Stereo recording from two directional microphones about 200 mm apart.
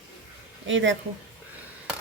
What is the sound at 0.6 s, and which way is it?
Speech, 70° right (ahead or behind).